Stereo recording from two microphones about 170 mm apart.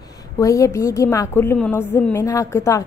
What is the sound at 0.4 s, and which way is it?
A woman's voice, 20° left (ahead or behind).